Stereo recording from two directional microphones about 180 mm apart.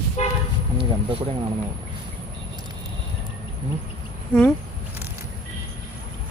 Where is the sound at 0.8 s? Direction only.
30° right (ahead or behind).